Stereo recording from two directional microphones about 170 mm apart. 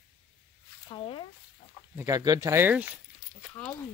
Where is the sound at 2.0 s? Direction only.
20° right (ahead or behind).